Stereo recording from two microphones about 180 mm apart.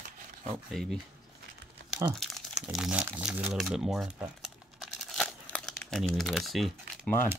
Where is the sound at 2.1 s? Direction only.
Centre (ahead or behind).